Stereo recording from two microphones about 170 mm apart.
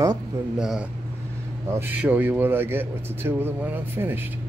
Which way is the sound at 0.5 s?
5° right (ahead or behind).